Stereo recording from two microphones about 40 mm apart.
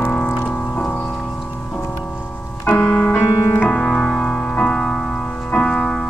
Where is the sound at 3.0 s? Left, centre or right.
Left.